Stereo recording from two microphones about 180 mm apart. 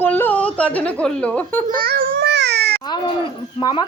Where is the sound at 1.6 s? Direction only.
55° right (ahead or behind).